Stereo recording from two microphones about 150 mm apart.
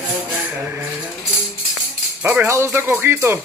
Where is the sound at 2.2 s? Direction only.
15° right (ahead or behind).